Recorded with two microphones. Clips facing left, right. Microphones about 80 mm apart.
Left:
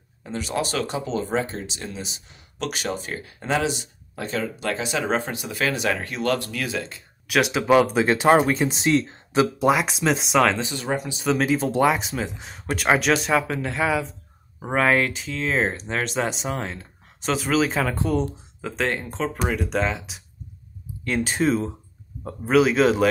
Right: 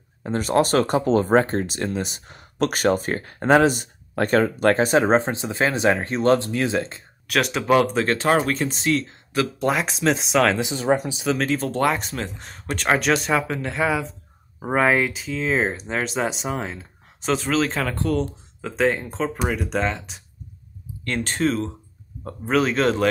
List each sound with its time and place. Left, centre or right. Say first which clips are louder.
0.2 s speech: right 7 dB; right
7.2 s speech: left 1 dB; centre
8.8 s speech: left 1 dB; left
9.6 s speech: left 2 dB; centre
10.8 s speech: right 6 dB; right
11.1 s speech: left 1 dB; centre
18.6 s speech: right 4 dB; centre